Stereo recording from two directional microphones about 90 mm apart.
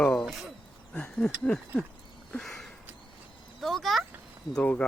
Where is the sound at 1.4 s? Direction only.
10° left (ahead or behind).